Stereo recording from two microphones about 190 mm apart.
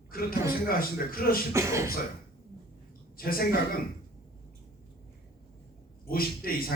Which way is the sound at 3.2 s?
50° left (ahead or behind).